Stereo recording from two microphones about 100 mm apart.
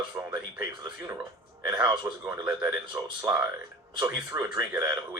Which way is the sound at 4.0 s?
40° right (ahead or behind).